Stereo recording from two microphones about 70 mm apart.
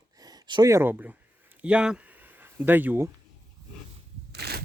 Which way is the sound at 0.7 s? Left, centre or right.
Right.